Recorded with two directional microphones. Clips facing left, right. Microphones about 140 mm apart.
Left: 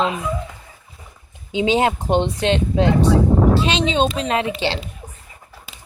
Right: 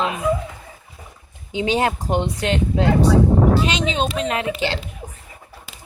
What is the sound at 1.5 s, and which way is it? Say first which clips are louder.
Speech: left 2 dB; 20° left (ahead or behind).